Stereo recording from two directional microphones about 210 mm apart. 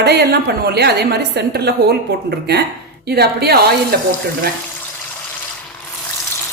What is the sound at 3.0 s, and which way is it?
A woman's voice, 50° right (ahead or behind).